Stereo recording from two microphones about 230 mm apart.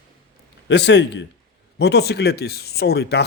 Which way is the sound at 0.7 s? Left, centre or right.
Left.